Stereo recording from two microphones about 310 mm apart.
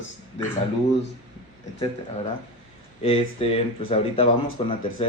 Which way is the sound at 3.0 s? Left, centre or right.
Centre.